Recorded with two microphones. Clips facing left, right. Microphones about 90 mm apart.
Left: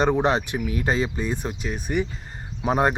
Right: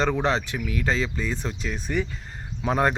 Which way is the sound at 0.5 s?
30° left (ahead or behind).